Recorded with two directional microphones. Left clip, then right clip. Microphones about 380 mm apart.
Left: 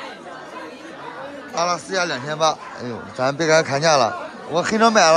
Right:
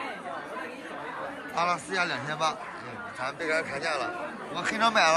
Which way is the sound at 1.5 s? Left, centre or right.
Centre.